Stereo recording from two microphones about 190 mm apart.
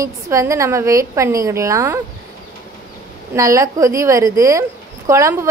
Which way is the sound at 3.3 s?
15° right (ahead or behind).